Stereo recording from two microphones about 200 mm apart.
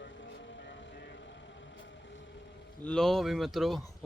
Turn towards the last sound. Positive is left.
turn(degrees=0)  # may be behind; listen again after turning